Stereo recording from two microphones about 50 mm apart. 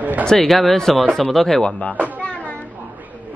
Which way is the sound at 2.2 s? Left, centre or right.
Left.